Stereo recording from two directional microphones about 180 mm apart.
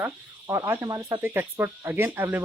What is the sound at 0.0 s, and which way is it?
Speech, 15° right (ahead or behind).